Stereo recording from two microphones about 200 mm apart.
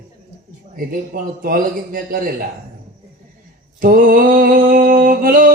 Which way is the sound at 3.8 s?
45° right (ahead or behind).